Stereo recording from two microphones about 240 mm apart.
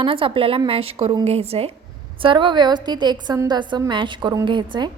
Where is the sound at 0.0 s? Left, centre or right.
Right.